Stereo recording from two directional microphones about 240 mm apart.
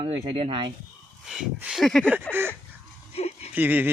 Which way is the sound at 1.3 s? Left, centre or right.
Centre.